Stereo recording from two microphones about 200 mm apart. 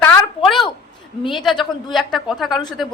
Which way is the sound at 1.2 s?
Centre (ahead or behind).